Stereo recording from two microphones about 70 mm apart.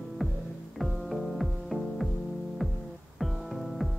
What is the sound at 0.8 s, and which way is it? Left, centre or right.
Music, centre.